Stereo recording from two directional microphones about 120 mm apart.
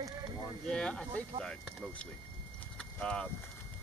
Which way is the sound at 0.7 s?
5° left (ahead or behind).